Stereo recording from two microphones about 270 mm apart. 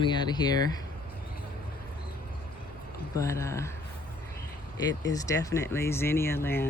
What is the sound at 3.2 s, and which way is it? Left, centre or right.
Speech, centre.